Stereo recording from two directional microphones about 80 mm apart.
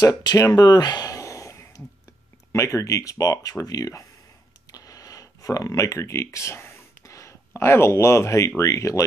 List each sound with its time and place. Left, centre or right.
0.0 s speech: left
4.6 s a sound: left
8.5 s speech: left